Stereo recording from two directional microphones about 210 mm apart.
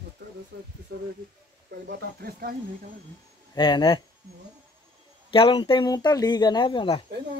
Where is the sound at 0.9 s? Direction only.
50° right (ahead or behind).